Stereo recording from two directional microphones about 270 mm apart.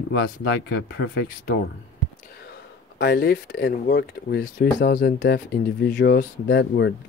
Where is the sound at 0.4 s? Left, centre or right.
Left.